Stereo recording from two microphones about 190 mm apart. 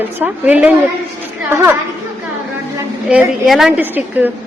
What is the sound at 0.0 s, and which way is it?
A woman's voice, 10° right (ahead or behind).